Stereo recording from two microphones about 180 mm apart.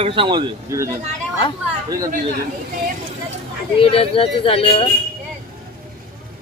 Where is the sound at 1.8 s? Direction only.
20° right (ahead or behind).